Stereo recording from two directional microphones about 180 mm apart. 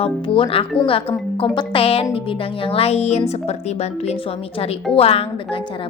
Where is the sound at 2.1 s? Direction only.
30° left (ahead or behind).